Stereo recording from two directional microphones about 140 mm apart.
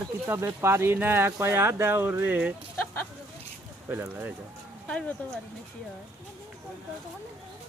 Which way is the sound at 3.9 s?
15° right (ahead or behind).